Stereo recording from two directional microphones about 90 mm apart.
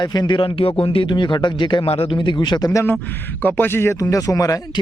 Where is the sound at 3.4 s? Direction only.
25° left (ahead or behind); by 4.6 s 40° left (ahead or behind).